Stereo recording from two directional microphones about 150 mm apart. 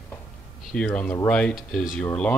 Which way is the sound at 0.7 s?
10° left (ahead or behind).